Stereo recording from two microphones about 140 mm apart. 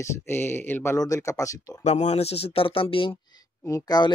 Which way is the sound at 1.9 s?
50° left (ahead or behind).